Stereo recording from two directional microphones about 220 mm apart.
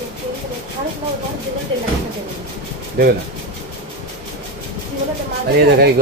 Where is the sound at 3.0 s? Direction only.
40° right (ahead or behind).